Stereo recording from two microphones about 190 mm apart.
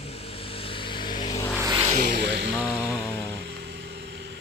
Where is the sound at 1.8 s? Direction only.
40° right (ahead or behind).